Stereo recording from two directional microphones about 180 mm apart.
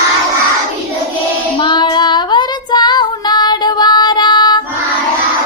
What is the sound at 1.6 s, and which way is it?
Child singing, 25° left (ahead or behind).